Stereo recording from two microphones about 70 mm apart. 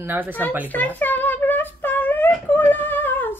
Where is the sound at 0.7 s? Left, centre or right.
Left.